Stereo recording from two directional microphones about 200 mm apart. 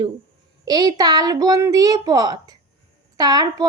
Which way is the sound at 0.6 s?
20° right (ahead or behind).